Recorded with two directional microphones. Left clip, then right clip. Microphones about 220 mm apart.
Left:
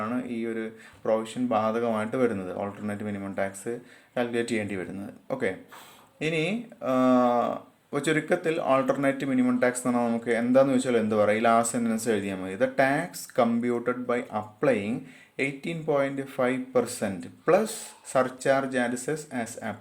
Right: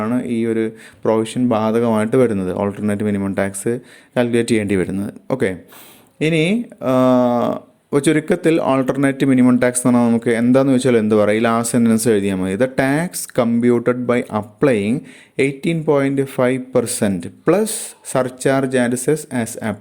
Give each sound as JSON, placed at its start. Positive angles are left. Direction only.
{"t": 0.0, "sound": "speech", "side_deg": -40}